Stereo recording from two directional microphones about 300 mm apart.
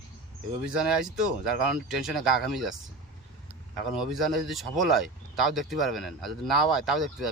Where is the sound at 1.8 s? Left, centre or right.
Centre.